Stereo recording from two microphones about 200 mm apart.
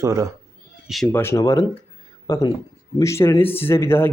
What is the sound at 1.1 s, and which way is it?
Speech, 15° left (ahead or behind).